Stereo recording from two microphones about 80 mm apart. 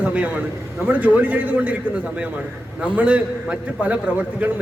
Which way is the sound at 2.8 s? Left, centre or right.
Centre.